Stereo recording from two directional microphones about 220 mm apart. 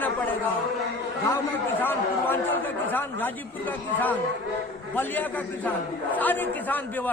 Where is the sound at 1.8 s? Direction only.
10° left (ahead or behind).